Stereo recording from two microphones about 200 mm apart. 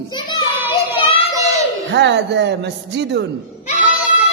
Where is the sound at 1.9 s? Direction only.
60° right (ahead or behind).